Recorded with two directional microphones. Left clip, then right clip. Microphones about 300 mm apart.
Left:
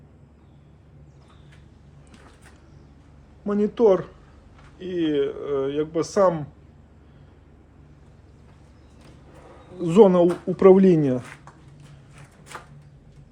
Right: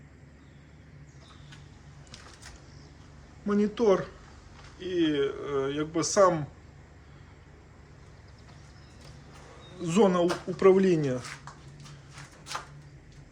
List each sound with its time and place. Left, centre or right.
3.4 s speech: centre
9.7 s speech: centre